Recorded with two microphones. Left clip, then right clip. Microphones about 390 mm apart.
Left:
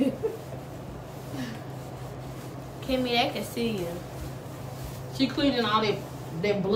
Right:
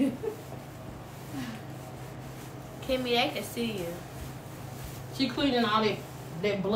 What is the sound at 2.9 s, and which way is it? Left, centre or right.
Speech, centre.